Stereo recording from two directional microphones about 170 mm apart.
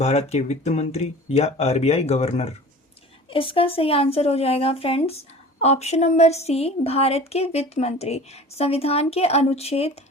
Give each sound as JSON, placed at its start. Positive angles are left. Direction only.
{"t": 0.0, "sound": "a woman's voice", "side_deg": 40}